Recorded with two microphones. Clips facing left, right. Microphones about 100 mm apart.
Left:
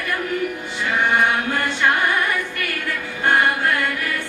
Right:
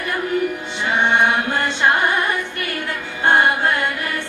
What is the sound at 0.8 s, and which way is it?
Chant, 25° right (ahead or behind).